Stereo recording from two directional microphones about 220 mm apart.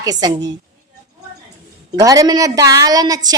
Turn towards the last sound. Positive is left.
turn(degrees=-15)  # may be behind; listen again after turning